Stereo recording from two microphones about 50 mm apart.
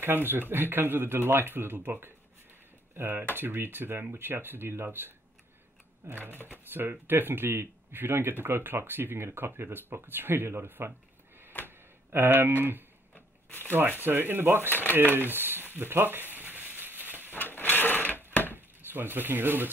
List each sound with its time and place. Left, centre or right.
0.0 s speech: right
11.6 s a sound: right
13.7 s speech: right
14.7 s speech: left
15.3 s speech: right
15.7 s crumpling: right
17.3 s sewing machine: left
18.3 s a sound: left
18.9 s speech: right